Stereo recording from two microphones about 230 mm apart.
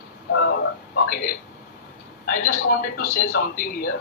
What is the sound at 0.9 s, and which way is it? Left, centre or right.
Speech, left.